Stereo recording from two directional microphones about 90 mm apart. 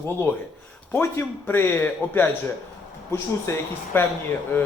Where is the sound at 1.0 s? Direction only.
25° left (ahead or behind).